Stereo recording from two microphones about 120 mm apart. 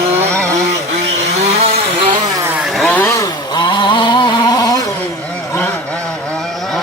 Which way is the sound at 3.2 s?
35° left (ahead or behind).